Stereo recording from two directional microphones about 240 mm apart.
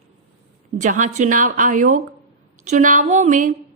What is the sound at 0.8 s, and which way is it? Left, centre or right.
A woman's voice, right.